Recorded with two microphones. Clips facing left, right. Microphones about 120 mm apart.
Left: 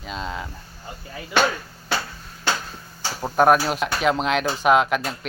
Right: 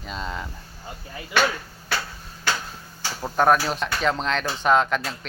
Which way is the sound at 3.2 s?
10° left (ahead or behind).